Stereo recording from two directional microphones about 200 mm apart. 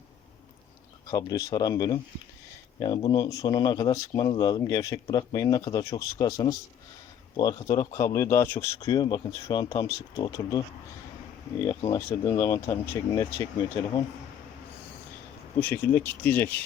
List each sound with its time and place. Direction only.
1.0 s speech: 20° left (ahead or behind)
12.0 s speech: 15° left (ahead or behind)
15.5 s speech: 10° left (ahead or behind)